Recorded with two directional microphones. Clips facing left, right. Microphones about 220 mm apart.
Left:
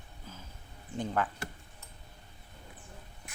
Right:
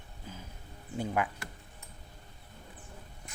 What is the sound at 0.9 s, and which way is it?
Speech, 10° right (ahead or behind).